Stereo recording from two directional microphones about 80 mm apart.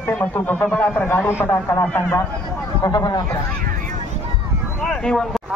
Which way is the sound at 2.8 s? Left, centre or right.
Left.